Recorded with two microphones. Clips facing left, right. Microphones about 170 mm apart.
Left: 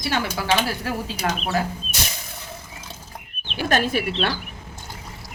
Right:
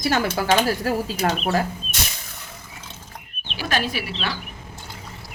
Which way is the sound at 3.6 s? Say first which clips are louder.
Left 4 dB; 50° left (ahead or behind).